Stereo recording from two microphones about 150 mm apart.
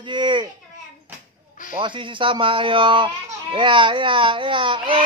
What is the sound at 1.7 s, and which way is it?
Speech, 35° right (ahead or behind).